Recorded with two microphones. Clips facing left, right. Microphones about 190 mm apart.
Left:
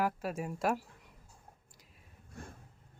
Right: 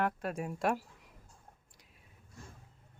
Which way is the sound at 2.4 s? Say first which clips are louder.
Left 5 dB; 60° left (ahead or behind).